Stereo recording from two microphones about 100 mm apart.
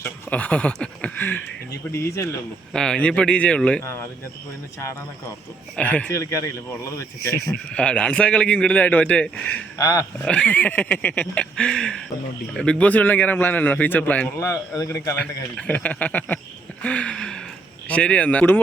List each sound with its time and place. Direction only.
0.0 s speech: 15° left (ahead or behind)
1.9 s speech: 25° left (ahead or behind)
2.7 s a man's voice: 10° left (ahead or behind)
5.7 s a man's voice: 15° left (ahead or behind)
6.1 s speech: 30° left (ahead or behind)
7.7 s a man's voice: 10° left (ahead or behind)
9.7 s speech: 35° left (ahead or behind)
10.2 s a man's voice: 15° left (ahead or behind)
14.3 s speech: 35° left (ahead or behind)
15.1 s a man's voice: 15° left (ahead or behind)
16.8 s a sound: 10° left (ahead or behind)
17.8 s a man's voice: 10° left (ahead or behind)